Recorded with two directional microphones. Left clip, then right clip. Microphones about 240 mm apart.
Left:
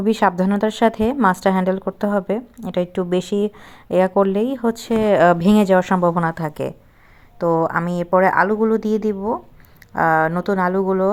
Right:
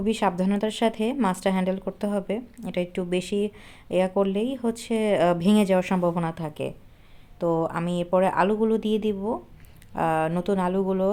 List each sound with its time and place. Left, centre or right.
0.0 s a woman's voice: centre
8.8 s speech: centre
9.9 s a woman's voice: centre